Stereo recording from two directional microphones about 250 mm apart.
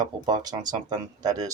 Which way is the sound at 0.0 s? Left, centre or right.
Centre.